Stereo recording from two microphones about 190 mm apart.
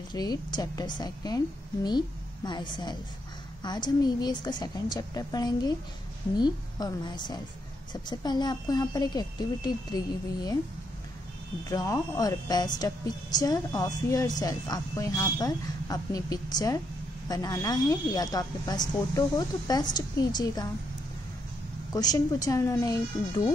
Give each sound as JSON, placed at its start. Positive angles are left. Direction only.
{"t": 0.1, "sound": "speech", "side_deg": 20}
{"t": 11.7, "sound": "speech", "side_deg": 20}
{"t": 21.9, "sound": "speech", "side_deg": 20}